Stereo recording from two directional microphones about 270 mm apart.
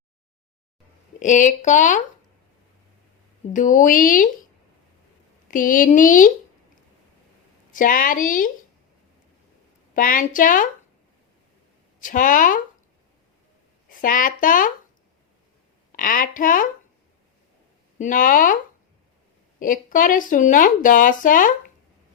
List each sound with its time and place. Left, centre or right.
1.2 s speech: left
3.5 s speech: left
5.5 s speech: left
7.7 s speech: left
9.9 s speech: left
12.0 s speech: left
14.0 s speech: left
15.9 s speech: left
17.9 s speech: left